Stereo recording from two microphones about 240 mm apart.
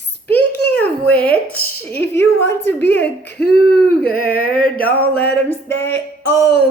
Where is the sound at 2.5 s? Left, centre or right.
Centre.